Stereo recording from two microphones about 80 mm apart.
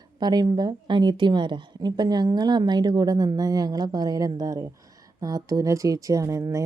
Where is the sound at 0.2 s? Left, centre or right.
Right.